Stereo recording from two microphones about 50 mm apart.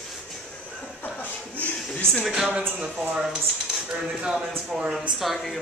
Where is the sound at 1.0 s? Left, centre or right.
Left.